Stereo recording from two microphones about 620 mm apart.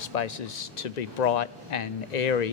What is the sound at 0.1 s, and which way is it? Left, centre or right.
Speech, left.